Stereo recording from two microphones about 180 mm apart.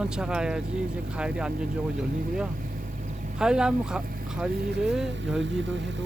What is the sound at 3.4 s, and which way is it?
Speech, 5° right (ahead or behind).